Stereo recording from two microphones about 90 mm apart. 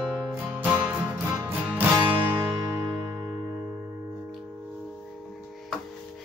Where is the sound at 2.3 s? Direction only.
60° right (ahead or behind).